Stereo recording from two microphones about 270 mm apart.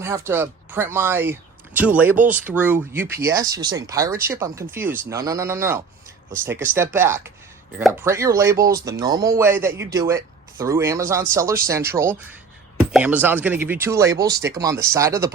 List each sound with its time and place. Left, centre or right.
0.0 s speech: centre